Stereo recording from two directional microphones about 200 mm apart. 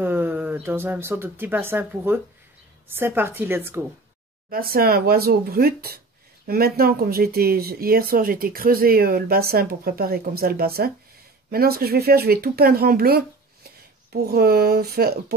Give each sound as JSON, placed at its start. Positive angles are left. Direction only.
{"t": 0.0, "sound": "a woman's voice", "side_deg": -10}
{"t": 4.5, "sound": "speech", "side_deg": -45}